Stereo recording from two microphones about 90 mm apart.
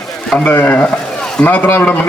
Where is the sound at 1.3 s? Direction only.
15° left (ahead or behind).